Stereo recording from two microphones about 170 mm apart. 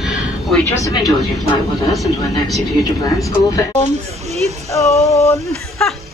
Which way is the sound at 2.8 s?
20° left (ahead or behind).